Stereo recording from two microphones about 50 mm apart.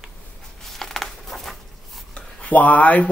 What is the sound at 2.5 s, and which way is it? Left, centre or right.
Speech, left.